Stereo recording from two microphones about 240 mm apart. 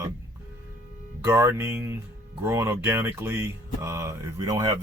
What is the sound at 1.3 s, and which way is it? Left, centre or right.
Speech, centre.